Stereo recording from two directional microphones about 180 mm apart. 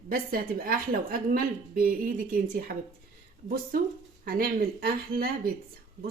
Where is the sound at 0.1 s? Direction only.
55° right (ahead or behind).